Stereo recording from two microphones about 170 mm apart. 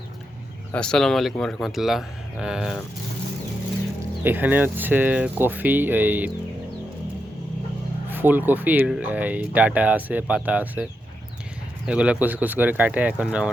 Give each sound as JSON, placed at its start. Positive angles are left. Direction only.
{"t": 0.7, "sound": "speech", "side_deg": 5}
{"t": 4.2, "sound": "speech", "side_deg": -10}
{"t": 8.1, "sound": "speech", "side_deg": -10}
{"t": 11.9, "sound": "speech", "side_deg": -5}